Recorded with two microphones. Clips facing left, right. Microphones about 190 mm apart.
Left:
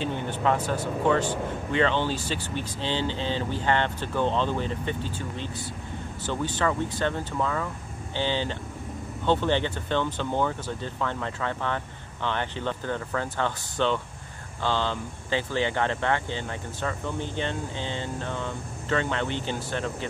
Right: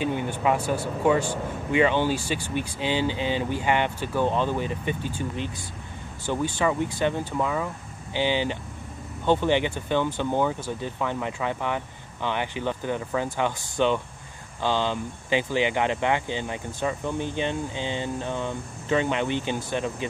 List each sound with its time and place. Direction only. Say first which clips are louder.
0.0 s speech: right 2 dB; 10° right (ahead or behind)